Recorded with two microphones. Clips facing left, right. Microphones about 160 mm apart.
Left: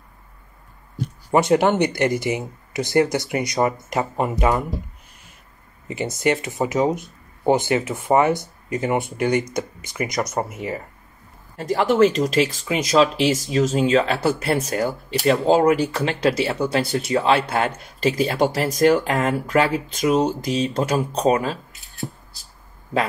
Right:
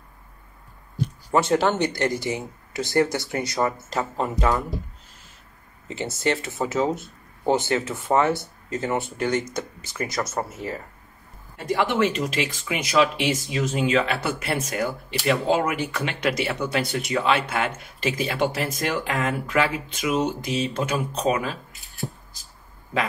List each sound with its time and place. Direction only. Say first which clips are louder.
1.3 s speech: left 4 dB; 15° left (ahead or behind)
5.9 s speech: left 4 dB; 15° left (ahead or behind)
11.5 s speech: left 4 dB; 40° left (ahead or behind)